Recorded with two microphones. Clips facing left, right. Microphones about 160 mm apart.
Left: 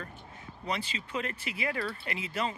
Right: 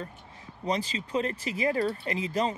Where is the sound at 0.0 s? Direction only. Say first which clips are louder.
Right 3 dB; 35° right (ahead or behind).